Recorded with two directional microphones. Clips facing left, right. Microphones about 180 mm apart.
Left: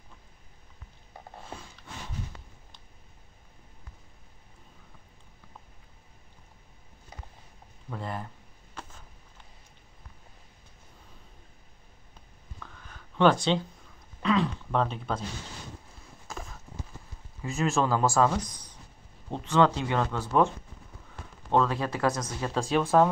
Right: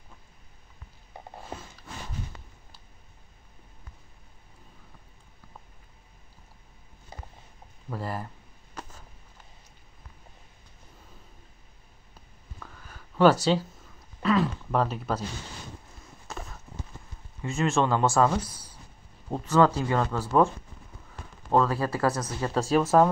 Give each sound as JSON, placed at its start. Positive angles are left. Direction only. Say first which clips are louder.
{"t": 7.1, "sound": "a sound", "louder": "right 3 dB", "side_deg": -30}
{"t": 7.9, "sound": "speech", "louder": "right 2 dB", "side_deg": -5}
{"t": 12.5, "sound": "a sound", "louder": "right 1 dB", "side_deg": -10}
{"t": 14.2, "sound": "speech", "louder": "right 2 dB", "side_deg": -5}
{"t": 16.3, "sound": "clip-clop", "louder": "right 1 dB", "side_deg": 0}
{"t": 17.4, "sound": "speech", "louder": "right 2 dB", "side_deg": 0}
{"t": 19.8, "sound": "speech", "louder": "right 2 dB", "side_deg": -5}
{"t": 21.5, "sound": "speech", "louder": "right 2 dB", "side_deg": -5}